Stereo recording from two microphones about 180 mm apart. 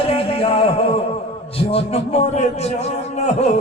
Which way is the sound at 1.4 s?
35° left (ahead or behind).